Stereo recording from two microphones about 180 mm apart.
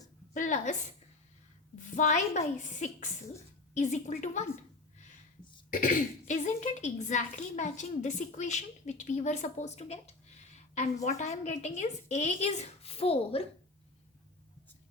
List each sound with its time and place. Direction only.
0.3 s a woman's voice: 45° left (ahead or behind)
1.8 s a woman's voice: 45° left (ahead or behind)
5.7 s speech: 45° left (ahead or behind)
11.2 s speech: 40° left (ahead or behind)